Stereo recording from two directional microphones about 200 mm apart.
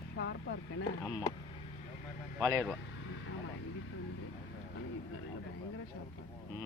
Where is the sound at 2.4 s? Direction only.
15° right (ahead or behind).